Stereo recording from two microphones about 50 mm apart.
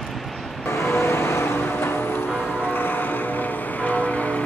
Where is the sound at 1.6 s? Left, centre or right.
Left.